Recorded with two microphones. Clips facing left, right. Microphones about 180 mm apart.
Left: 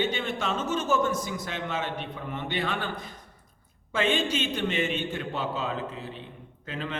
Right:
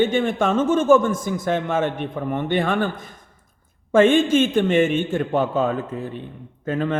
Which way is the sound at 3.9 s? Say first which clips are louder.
Right 12 dB; 50° right (ahead or behind).